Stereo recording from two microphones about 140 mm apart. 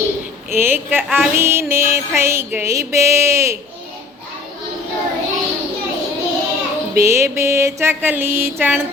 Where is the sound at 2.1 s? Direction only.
20° right (ahead or behind).